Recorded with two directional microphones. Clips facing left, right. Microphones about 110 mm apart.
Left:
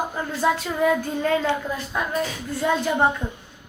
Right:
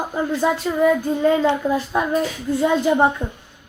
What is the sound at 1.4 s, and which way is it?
Speech, 25° right (ahead or behind).